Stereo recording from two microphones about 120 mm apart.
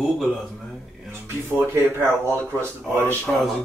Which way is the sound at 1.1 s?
20° right (ahead or behind).